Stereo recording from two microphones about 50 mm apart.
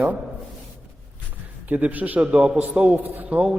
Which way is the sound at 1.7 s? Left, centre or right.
Right.